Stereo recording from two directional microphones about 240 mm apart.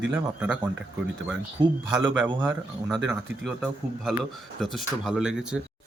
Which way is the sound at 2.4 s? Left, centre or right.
Centre.